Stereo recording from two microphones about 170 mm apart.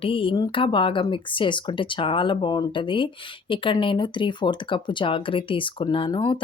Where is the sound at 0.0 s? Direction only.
30° left (ahead or behind).